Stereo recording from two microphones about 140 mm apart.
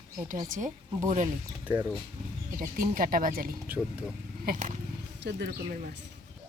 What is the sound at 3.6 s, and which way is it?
Speech, 10° right (ahead or behind).